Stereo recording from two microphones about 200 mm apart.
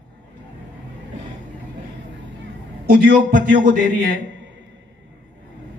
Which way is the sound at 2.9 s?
45° right (ahead or behind).